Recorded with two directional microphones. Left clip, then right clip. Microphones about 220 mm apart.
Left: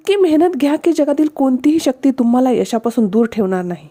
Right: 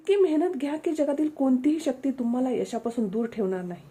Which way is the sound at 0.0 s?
45° left (ahead or behind).